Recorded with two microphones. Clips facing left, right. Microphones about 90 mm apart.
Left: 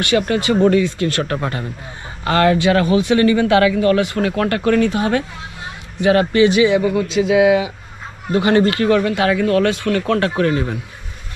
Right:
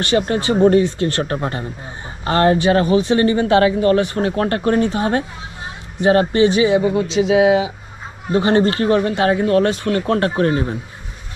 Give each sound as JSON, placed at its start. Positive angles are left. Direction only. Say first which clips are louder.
{"t": 0.0, "sound": "speech", "louder": "even", "side_deg": -25}